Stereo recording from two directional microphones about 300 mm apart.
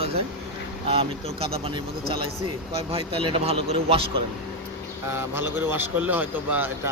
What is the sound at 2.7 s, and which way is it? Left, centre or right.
A man's voice, centre.